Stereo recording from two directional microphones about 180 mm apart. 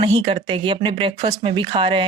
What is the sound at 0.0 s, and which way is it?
Speech, 30° right (ahead or behind).